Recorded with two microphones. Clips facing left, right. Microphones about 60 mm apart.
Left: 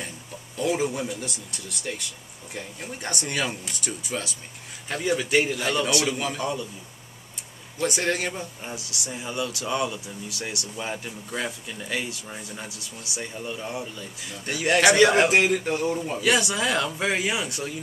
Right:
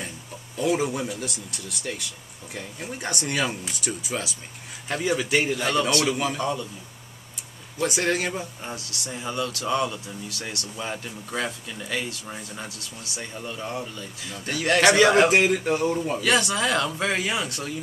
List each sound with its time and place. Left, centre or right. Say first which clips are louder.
0.6 s speech: right 1 dB; centre
6.0 s speech: right 2 dB; centre
7.8 s speech: right 1 dB; centre
8.7 s speech: even; centre
16.2 s speech: left 1 dB; centre